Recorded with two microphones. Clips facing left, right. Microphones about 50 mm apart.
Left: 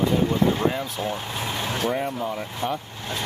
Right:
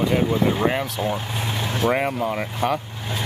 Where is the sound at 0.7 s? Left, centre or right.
Right.